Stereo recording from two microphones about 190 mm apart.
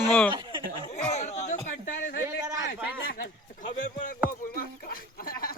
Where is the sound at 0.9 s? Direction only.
35° left (ahead or behind).